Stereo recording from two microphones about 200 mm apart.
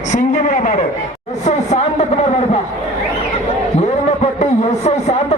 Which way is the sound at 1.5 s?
35° left (ahead or behind).